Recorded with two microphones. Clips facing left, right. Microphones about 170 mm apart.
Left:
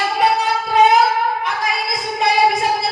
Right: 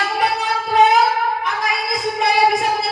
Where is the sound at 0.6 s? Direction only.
Centre (ahead or behind).